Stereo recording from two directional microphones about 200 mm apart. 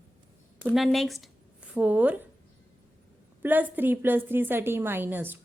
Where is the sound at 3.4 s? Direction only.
10° right (ahead or behind).